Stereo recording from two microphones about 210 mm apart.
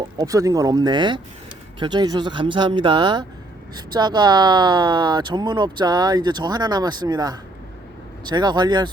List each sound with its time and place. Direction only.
0.2 s speech: 15° right (ahead or behind)